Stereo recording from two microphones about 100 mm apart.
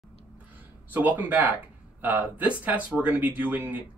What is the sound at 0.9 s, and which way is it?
Speech, 15° right (ahead or behind).